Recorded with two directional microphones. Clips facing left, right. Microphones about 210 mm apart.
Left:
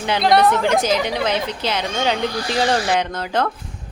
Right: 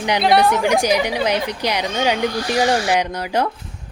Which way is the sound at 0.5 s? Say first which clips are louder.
Right 1 dB; 15° right (ahead or behind).